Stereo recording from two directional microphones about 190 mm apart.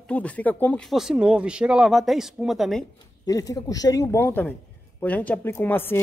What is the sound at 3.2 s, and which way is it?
Speech, 20° left (ahead or behind).